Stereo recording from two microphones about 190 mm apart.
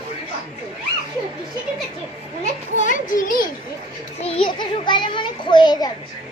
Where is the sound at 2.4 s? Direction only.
40° left (ahead or behind).